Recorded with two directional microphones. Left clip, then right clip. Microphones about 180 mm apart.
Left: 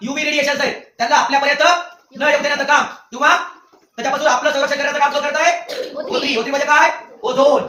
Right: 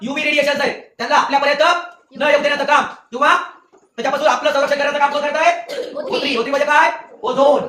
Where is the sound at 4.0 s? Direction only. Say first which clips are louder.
Even; 25° right (ahead or behind).